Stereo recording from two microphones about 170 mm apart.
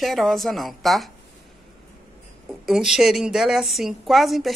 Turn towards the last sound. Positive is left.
turn(degrees=0)  # may be behind; listen again after turning